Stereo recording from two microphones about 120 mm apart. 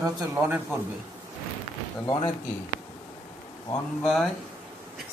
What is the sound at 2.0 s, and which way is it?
Speech, 35° left (ahead or behind).